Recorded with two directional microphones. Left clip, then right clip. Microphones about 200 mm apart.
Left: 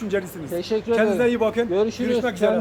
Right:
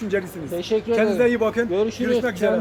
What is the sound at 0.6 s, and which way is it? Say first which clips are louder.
Speech: right 1 dB; 15° left (ahead or behind).